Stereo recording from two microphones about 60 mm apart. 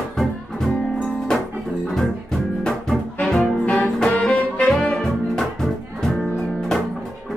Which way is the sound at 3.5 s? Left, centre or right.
Left.